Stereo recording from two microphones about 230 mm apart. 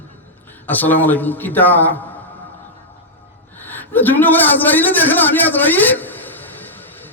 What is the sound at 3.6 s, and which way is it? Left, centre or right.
A man's voice, centre.